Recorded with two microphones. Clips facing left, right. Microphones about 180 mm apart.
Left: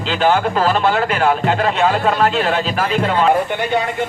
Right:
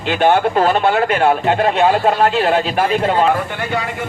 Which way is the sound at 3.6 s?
20° left (ahead or behind).